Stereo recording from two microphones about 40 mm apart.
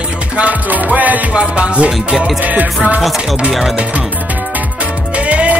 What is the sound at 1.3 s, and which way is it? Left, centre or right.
Music, right.